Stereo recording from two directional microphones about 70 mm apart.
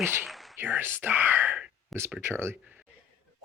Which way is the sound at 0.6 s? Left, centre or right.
Right.